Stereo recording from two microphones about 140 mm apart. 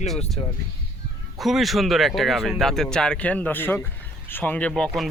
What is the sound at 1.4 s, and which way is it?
Speech, centre (ahead or behind).